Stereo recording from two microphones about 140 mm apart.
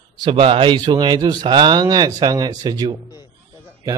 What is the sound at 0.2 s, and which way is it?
Speech, 40° right (ahead or behind).